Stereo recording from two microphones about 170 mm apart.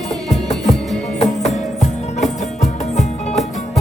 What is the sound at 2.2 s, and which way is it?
Music, 45° left (ahead or behind).